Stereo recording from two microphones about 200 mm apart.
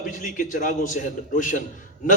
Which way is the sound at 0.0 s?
40° left (ahead or behind).